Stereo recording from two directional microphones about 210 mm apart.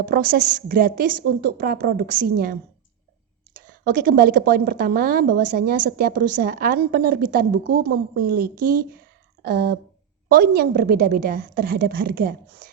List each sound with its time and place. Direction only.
0.0 s a woman's voice: 45° right (ahead or behind)
3.6 s a woman's voice: 40° right (ahead or behind)